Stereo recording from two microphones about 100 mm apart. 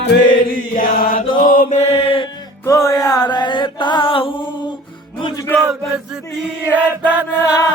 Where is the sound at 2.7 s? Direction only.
35° left (ahead or behind); by 4.3 s 65° left (ahead or behind).